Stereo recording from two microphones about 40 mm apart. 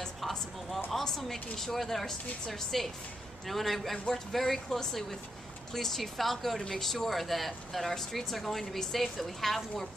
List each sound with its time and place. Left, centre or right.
0.9 s a woman's voice: centre